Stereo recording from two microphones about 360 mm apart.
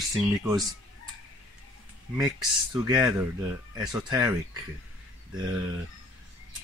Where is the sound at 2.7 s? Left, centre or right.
Centre.